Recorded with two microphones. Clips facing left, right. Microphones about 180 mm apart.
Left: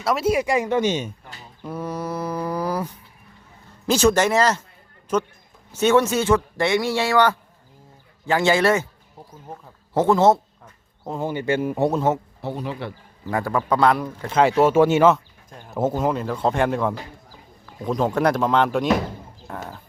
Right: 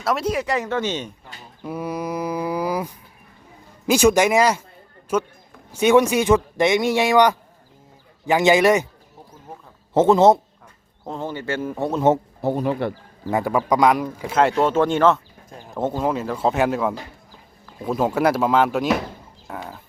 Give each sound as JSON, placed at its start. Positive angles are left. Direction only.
{"t": 0.0, "sound": "speech", "side_deg": 0}
{"t": 1.6, "sound": "mantra", "side_deg": -10}
{"t": 3.8, "sound": "speech", "side_deg": -10}
{"t": 9.9, "sound": "a man's voice", "side_deg": -20}
{"t": 11.0, "sound": "speech", "side_deg": 10}
{"t": 12.4, "sound": "speech", "side_deg": -50}
{"t": 13.2, "sound": "speech", "side_deg": -15}
{"t": 15.4, "sound": "a sound", "side_deg": -5}
{"t": 15.7, "sound": "speech", "side_deg": 5}